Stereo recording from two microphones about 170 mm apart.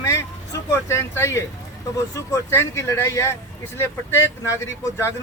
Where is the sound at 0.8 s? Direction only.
15° left (ahead or behind).